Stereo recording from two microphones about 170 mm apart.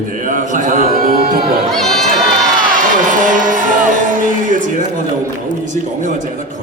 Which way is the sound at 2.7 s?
50° right (ahead or behind).